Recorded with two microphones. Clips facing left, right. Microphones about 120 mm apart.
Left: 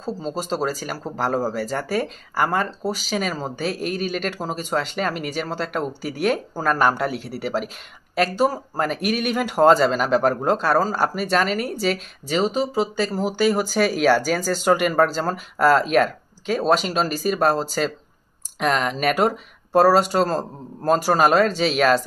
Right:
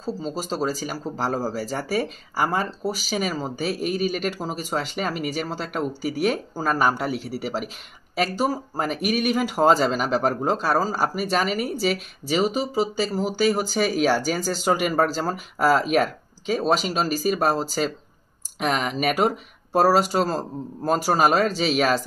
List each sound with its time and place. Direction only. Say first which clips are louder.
0.3 s speech: left 2 dB; 5° right (ahead or behind)
2.3 s speech: left 2 dB; 55° left (ahead or behind)
2.6 s speech: left 2 dB; 5° right (ahead or behind)